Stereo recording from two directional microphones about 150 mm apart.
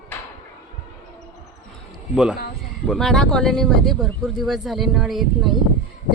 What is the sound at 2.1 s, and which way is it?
Speech, 5° right (ahead or behind).